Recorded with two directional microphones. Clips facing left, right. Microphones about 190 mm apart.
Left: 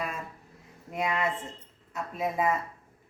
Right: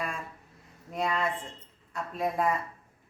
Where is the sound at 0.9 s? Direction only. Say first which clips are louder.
Even; 5° left (ahead or behind).